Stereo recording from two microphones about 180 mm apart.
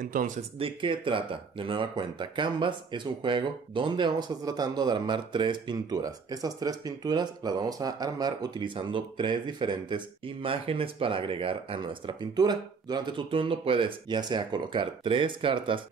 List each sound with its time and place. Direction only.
0.0 s speech: 50° right (ahead or behind)
0.6 s speech: 30° right (ahead or behind)